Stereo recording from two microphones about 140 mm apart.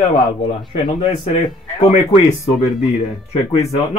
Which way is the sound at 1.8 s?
50° left (ahead or behind).